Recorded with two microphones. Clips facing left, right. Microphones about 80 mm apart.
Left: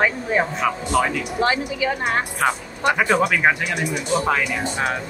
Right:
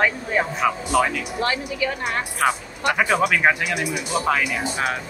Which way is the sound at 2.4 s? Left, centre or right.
Centre.